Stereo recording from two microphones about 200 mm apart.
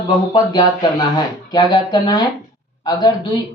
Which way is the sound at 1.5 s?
20° left (ahead or behind).